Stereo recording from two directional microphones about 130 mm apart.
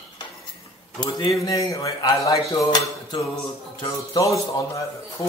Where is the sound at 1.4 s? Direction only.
25° left (ahead or behind).